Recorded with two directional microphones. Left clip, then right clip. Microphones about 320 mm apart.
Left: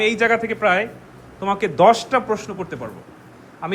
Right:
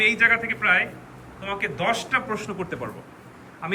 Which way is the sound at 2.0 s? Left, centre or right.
Centre.